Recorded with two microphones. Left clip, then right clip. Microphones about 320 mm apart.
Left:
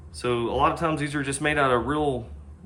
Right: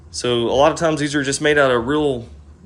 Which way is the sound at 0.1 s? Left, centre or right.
Centre.